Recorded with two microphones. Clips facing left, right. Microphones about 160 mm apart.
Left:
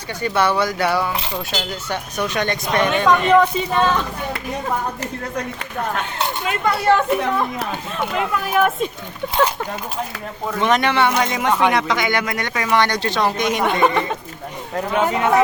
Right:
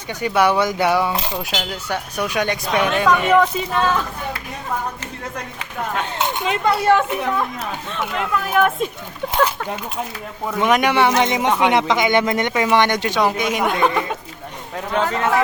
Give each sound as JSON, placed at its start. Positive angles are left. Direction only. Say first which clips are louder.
{"t": 0.1, "sound": "speech", "louder": "right 2 dB", "side_deg": -15}
{"t": 7.2, "sound": "speech", "louder": "left 1 dB", "side_deg": 0}
{"t": 10.6, "sound": "speech", "louder": "right 1 dB", "side_deg": -10}
{"t": 15.0, "sound": "speech", "louder": "left 3 dB", "side_deg": 15}